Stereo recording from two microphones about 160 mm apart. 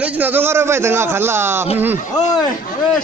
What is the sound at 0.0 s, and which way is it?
A man's voice, 10° right (ahead or behind).